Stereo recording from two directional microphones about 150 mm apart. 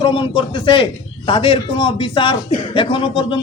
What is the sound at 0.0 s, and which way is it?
A man's voice, 35° left (ahead or behind).